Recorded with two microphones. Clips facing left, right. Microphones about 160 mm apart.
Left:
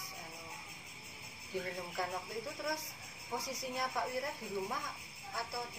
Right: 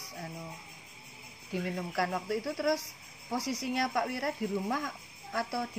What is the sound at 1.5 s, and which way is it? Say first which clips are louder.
Speech: right 6 dB; 80° right.